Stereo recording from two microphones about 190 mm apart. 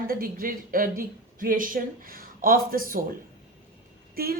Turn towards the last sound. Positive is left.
turn(degrees=-50)  # may be behind; listen again after turning